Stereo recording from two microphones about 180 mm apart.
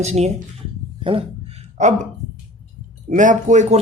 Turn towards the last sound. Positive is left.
turn(degrees=-40)  # may be behind; listen again after turning